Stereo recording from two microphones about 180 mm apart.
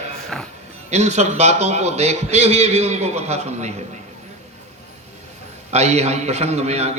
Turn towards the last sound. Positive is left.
turn(degrees=-35)  # may be behind; listen again after turning